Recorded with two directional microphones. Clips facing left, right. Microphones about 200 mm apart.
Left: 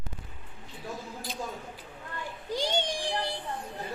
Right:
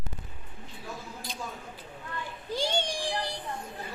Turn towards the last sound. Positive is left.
turn(degrees=25)  # may be behind; listen again after turning